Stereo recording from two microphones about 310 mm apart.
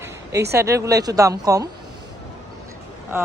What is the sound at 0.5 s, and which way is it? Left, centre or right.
Speech, centre.